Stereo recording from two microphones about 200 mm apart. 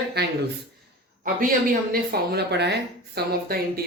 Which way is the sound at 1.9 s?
55° right (ahead or behind).